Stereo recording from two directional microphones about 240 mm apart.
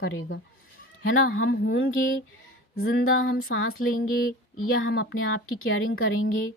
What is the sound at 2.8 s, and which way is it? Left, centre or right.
A woman's voice, left.